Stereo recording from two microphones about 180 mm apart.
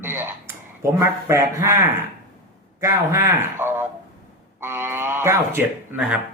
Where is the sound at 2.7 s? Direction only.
20° right (ahead or behind).